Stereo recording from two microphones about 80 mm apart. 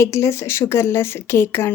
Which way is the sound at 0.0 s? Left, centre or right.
Left.